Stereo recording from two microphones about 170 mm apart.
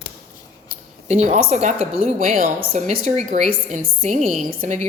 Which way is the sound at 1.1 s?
40° right (ahead or behind).